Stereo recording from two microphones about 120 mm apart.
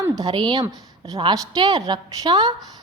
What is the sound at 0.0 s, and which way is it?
A woman's voice, 35° right (ahead or behind).